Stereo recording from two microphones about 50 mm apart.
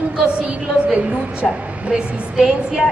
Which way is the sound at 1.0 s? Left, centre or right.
Right.